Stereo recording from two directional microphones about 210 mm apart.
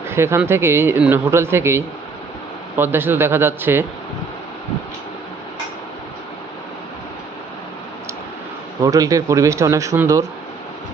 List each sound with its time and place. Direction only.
0.1 s speech: 10° right (ahead or behind)
8.8 s speech: 15° right (ahead or behind)